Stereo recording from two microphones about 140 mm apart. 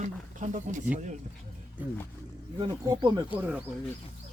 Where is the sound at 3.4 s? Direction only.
10° right (ahead or behind).